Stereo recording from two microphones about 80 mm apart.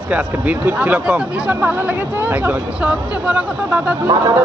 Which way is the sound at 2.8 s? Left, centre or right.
Centre.